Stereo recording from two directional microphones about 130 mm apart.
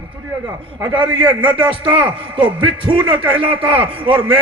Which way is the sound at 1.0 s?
40° right (ahead or behind).